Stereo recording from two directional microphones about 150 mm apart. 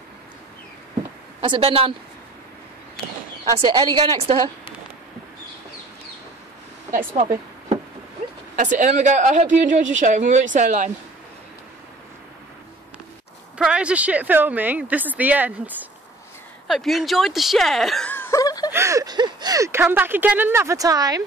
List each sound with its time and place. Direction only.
1.4 s a woman's voice: 35° right (ahead or behind)
3.5 s a woman's voice: 30° right (ahead or behind)
6.9 s speech: 65° right (ahead or behind)
8.5 s speech: 55° right (ahead or behind)
13.7 s speech: 5° right (ahead or behind)
16.6 s speech: centre (ahead or behind)
18.1 s snicker: 20° left (ahead or behind)
18.7 s speech: 20° right (ahead or behind)